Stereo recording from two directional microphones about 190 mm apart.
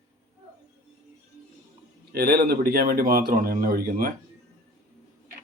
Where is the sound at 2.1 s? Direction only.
55° right (ahead or behind).